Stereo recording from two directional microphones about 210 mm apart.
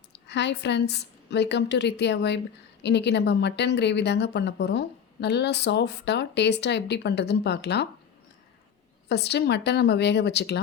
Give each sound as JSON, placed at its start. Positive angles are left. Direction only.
{"t": 0.1, "sound": "a woman's voice", "side_deg": 55}
{"t": 9.0, "sound": "a woman's voice", "side_deg": 50}